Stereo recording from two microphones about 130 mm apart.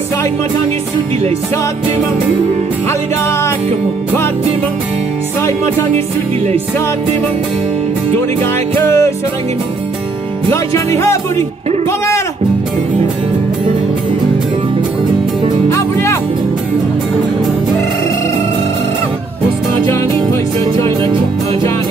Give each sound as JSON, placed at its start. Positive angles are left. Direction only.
{"t": 2.9, "sound": "music", "side_deg": 20}
{"t": 8.4, "sound": "music", "side_deg": 20}
{"t": 10.5, "sound": "music", "side_deg": 20}
{"t": 15.7, "sound": "music", "side_deg": 20}
{"t": 20.6, "sound": "music", "side_deg": -40}